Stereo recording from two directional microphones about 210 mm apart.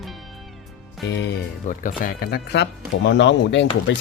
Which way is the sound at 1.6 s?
40° left (ahead or behind).